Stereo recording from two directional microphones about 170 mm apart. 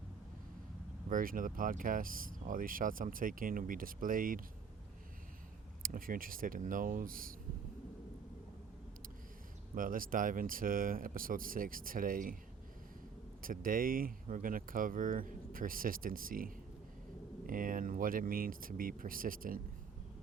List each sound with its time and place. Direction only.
1.1 s speech: 55° right (ahead or behind)
5.8 s speech: 55° right (ahead or behind)
9.7 s speech: 55° right (ahead or behind)
13.4 s speech: 55° right (ahead or behind)